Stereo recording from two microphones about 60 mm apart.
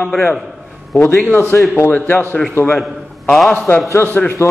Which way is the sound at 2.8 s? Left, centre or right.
Centre.